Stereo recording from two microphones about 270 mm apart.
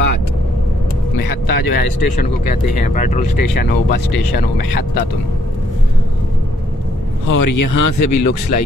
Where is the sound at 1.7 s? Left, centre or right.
Left.